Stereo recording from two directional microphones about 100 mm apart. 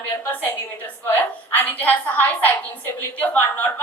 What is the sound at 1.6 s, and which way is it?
A woman's voice, 15° left (ahead or behind).